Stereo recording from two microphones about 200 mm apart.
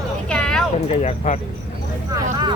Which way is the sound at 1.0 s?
35° left (ahead or behind).